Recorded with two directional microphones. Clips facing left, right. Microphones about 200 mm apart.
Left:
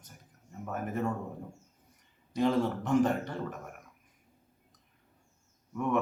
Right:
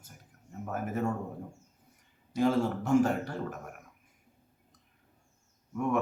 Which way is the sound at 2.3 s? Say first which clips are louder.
Right 1 dB; 5° right (ahead or behind).